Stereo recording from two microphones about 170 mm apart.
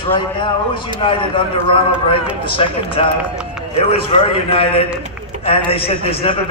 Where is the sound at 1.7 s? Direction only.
30° left (ahead or behind).